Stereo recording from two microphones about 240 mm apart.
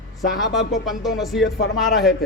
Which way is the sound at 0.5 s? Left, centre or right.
Centre.